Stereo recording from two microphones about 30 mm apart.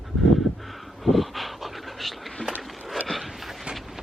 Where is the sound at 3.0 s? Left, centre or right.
Centre.